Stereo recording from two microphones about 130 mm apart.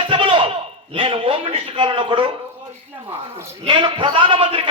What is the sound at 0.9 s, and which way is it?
A man's voice, 45° right (ahead or behind).